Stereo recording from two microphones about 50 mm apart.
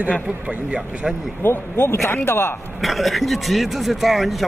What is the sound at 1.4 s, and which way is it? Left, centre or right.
A man's voice, left.